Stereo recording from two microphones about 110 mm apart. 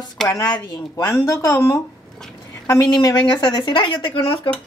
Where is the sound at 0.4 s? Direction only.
35° left (ahead or behind).